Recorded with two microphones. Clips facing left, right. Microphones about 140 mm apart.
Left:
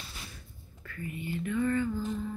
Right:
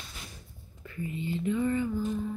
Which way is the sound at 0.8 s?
20° right (ahead or behind).